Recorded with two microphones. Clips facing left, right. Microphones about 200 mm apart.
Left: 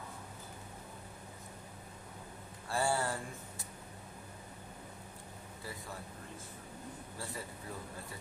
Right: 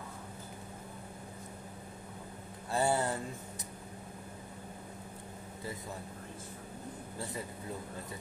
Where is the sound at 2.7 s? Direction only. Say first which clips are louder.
Right 3 dB; 20° right (ahead or behind).